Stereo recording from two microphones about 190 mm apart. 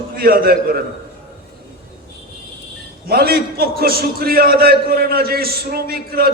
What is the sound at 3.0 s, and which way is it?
A man's voice, 55° right (ahead or behind).